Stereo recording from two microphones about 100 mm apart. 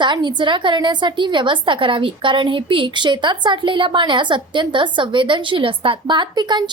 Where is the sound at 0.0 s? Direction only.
50° right (ahead or behind).